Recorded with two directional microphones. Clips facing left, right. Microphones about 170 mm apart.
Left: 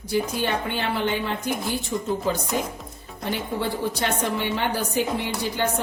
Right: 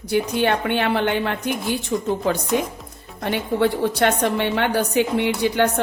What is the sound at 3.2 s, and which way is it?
A woman's voice, 65° right (ahead or behind).